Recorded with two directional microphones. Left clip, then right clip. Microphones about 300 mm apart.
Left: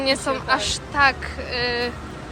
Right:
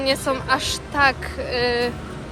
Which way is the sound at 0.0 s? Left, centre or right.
Centre.